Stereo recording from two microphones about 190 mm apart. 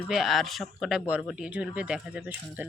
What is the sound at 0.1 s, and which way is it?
Speech, centre (ahead or behind).